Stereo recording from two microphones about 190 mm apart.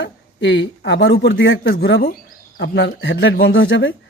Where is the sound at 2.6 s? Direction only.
70° left (ahead or behind).